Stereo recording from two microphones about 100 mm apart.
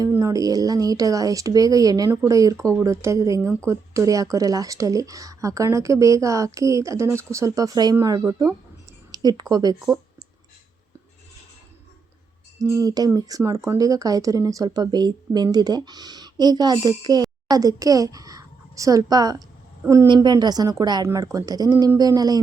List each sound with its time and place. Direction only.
0.2 s speech: 35° right (ahead or behind)
12.5 s a woman's voice: 40° right (ahead or behind)
19.8 s a woman's voice: 30° right (ahead or behind)
20.1 s speech: 40° right (ahead or behind)